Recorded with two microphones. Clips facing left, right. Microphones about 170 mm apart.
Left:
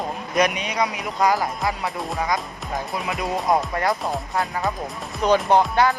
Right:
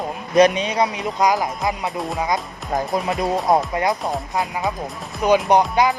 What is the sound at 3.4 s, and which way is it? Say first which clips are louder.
Speech: right 1 dB; 20° right (ahead or behind).